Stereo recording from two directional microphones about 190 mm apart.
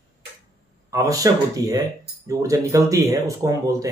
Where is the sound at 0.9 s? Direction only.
15° right (ahead or behind).